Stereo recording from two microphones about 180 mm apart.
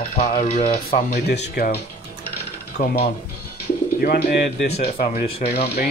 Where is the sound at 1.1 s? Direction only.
65° left (ahead or behind).